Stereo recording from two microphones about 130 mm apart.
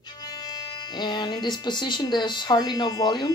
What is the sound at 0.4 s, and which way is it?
Speech, 30° left (ahead or behind).